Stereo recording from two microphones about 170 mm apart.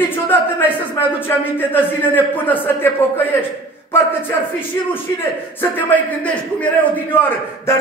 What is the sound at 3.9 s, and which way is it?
A man's voice, 15° left (ahead or behind).